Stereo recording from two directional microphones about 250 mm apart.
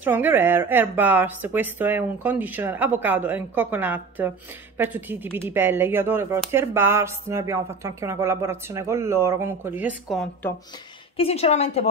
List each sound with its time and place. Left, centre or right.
0.0 s speech: centre
11.1 s a woman's voice: left